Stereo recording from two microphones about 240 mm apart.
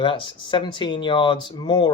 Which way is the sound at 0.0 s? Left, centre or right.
Left.